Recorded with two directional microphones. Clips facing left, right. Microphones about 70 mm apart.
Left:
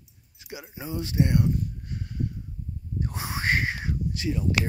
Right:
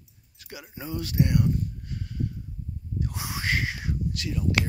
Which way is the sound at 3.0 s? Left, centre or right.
Left.